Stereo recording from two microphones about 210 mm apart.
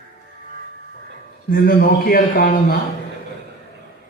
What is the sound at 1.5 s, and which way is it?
A man's voice, 45° left (ahead or behind).